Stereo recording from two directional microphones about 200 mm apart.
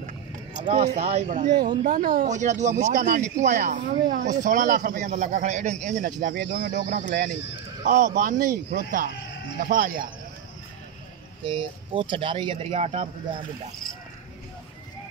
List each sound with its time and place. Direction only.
0.6 s speech: 35° right (ahead or behind)
11.4 s speech: 25° right (ahead or behind)